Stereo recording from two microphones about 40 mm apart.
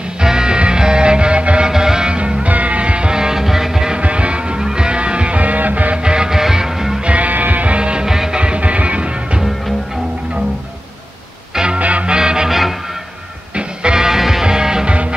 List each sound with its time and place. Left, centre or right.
0.2 s music: centre
1.7 s music: centre
3.9 s music: right
6.0 s music: centre
7.1 s music: right
7.7 s music: right
8.1 s music: centre
8.4 s music: right
11.5 s music: right
11.8 s music: right
12.2 s music: centre
12.4 s music: centre
13.6 s music: centre
14.9 s music: right